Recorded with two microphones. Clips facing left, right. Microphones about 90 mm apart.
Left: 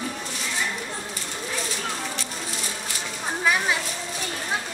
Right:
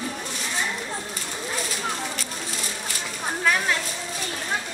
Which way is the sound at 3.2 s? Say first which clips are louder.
Even; 5° left (ahead or behind).